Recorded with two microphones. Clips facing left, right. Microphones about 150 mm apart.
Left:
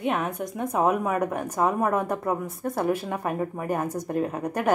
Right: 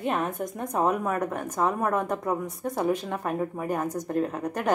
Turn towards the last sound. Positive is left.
turn(degrees=10)  # may be behind; listen again after turning